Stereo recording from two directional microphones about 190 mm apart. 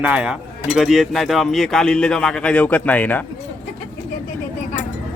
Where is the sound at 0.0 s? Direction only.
5° right (ahead or behind).